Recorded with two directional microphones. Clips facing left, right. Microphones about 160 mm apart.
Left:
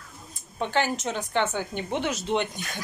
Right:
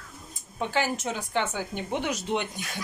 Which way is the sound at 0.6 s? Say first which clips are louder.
Left 2 dB; 10° right (ahead or behind).